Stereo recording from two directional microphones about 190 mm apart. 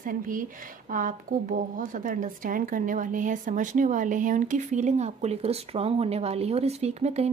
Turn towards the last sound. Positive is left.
turn(degrees=-35)  # may be behind; listen again after turning